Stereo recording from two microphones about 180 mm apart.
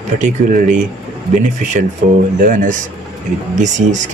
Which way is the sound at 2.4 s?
45° right (ahead or behind).